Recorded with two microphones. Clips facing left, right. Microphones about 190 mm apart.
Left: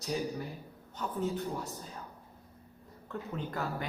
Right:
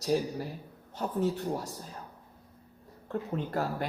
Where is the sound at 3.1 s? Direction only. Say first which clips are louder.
Right 6 dB; 35° right (ahead or behind).